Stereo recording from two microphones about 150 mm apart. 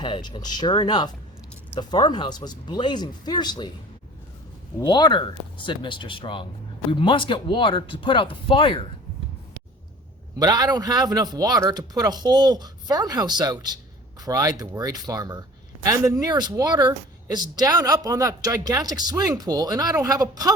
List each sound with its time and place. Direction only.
0.0 s speech: 30° left (ahead or behind)
4.8 s speech: 30° left (ahead or behind)
10.3 s a man's voice: 25° right (ahead or behind)